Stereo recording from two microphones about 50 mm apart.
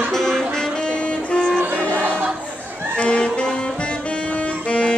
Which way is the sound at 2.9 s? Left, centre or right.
Left.